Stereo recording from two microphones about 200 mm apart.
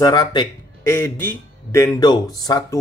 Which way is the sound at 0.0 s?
20° left (ahead or behind).